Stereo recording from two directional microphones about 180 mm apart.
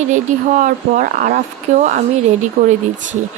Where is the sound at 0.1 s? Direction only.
45° right (ahead or behind).